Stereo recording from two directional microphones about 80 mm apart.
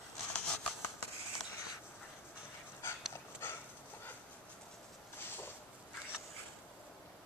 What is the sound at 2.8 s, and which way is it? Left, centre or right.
Dog, left.